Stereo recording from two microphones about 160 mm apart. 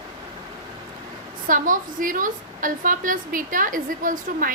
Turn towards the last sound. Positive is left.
turn(degrees=-60)  # may be behind; listen again after turning